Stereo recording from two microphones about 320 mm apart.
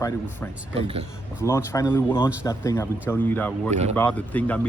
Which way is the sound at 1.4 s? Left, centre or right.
Centre.